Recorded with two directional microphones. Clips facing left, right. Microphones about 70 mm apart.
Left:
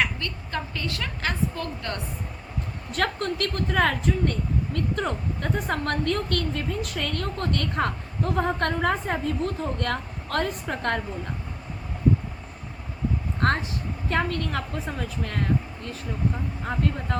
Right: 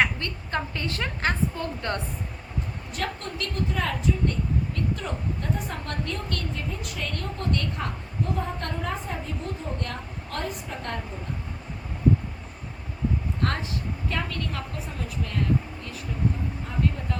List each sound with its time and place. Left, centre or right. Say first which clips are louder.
0.0 s a woman's voice: right 2 dB; right
2.9 s a woman's voice: left 6 dB; left
14.1 s speech: left 7 dB; left
16.6 s speech: left 2 dB; left